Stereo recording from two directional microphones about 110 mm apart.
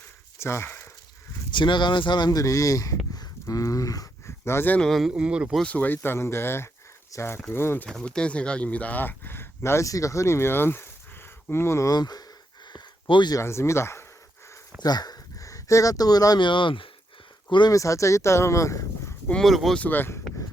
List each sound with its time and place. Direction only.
0.3 s a sound: 25° left (ahead or behind)
1.5 s speech: 45° left (ahead or behind)
3.2 s a sound: 30° left (ahead or behind)
4.8 s speech: centre (ahead or behind)
5.6 s speech: 15° left (ahead or behind)
7.9 s speech: 5° left (ahead or behind); by 11.9 s 25° left (ahead or behind)
11.9 s speech: 40° left (ahead or behind)
12.6 s a sound: 45° left (ahead or behind)
13.3 s speech: 25° left (ahead or behind)
14.8 s speech: 40° left (ahead or behind)
17.7 s speech: 30° left (ahead or behind)
19.3 s speech: centre (ahead or behind)
19.8 s speech: 15° left (ahead or behind)